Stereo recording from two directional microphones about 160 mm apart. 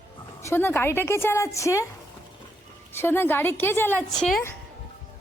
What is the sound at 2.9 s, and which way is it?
A woman's voice, 15° left (ahead or behind).